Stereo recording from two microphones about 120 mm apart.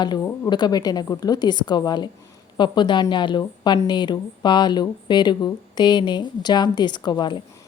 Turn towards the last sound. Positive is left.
turn(degrees=35)  # may be behind; listen again after turning